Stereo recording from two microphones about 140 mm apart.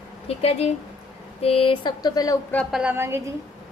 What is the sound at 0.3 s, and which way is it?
Speech, 45° left (ahead or behind).